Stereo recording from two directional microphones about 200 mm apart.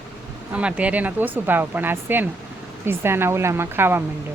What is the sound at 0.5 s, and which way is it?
Speech, 5° right (ahead or behind).